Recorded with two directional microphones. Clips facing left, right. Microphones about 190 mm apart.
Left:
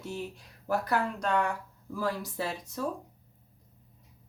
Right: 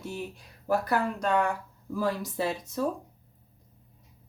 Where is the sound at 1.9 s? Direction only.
20° right (ahead or behind).